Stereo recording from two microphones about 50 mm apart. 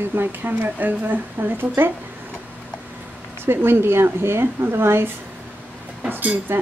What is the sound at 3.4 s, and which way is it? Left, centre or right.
A woman's voice, right.